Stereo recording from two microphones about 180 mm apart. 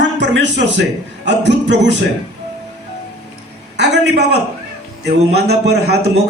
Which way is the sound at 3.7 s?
75° right (ahead or behind).